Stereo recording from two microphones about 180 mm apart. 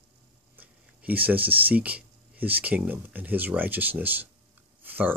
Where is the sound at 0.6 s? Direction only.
10° right (ahead or behind).